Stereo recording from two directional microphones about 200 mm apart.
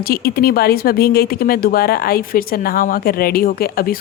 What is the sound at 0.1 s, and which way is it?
Speech, 50° left (ahead or behind).